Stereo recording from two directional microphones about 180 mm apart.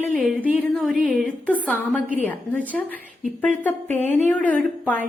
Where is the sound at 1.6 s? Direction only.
10° left (ahead or behind).